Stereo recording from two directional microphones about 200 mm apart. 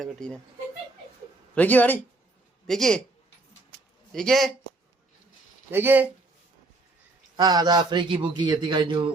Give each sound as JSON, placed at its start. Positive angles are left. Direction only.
{"t": 0.0, "sound": "speech", "side_deg": 5}
{"t": 1.5, "sound": "speech", "side_deg": 10}
{"t": 4.1, "sound": "speech", "side_deg": 0}
{"t": 5.7, "sound": "speech", "side_deg": -10}
{"t": 7.3, "sound": "a man's voice", "side_deg": -20}